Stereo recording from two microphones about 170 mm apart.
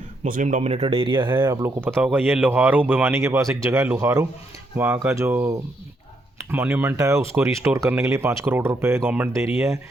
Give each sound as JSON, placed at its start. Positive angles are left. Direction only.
{"t": 0.3, "sound": "speech", "side_deg": -50}
{"t": 1.3, "sound": "speech", "side_deg": -15}